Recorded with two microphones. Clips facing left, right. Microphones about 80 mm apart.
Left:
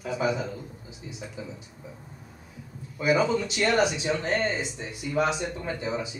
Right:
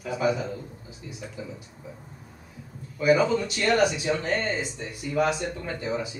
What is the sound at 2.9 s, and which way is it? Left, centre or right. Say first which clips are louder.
A man's voice: right 2 dB; centre.